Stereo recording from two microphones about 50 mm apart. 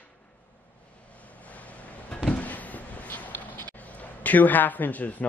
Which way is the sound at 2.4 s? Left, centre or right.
Left.